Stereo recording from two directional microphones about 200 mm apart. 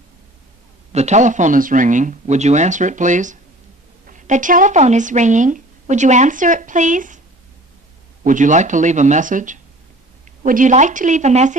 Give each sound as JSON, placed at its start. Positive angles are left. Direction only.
{"t": 0.9, "sound": "speech", "side_deg": -35}
{"t": 8.2, "sound": "speech", "side_deg": -40}